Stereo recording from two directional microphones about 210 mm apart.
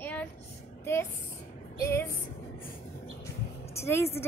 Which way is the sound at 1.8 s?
10° left (ahead or behind).